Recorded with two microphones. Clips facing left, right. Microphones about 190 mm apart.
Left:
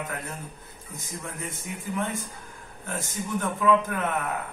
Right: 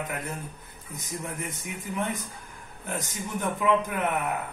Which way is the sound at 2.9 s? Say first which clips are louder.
Left 2 dB; 15° right (ahead or behind).